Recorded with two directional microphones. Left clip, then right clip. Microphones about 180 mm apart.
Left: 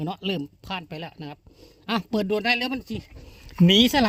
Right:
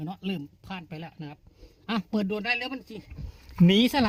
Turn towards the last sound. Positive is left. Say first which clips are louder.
# left 4 dB
turn(degrees=35)  # may be behind; listen again after turning